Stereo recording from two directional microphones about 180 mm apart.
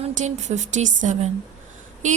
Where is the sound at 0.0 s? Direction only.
40° right (ahead or behind).